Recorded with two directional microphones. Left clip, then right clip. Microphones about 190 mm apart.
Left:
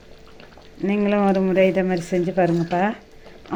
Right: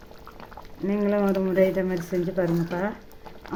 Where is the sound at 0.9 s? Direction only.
15° left (ahead or behind).